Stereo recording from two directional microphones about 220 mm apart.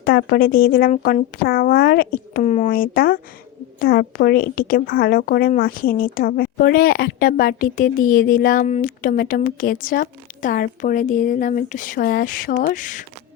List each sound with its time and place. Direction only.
0.0 s speech: 45° left (ahead or behind)